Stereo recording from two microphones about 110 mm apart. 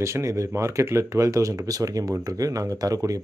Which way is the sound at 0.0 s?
25° right (ahead or behind).